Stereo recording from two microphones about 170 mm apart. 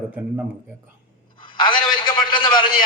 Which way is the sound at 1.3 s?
30° left (ahead or behind).